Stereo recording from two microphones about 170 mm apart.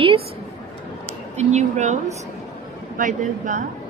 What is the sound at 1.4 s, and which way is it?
Speech, 40° right (ahead or behind).